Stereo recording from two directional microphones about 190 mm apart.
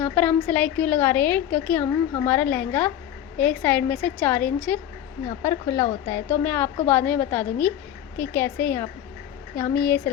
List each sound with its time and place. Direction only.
0.0 s a woman's voice: 10° left (ahead or behind)